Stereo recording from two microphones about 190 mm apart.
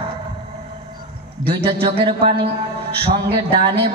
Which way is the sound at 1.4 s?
25° right (ahead or behind).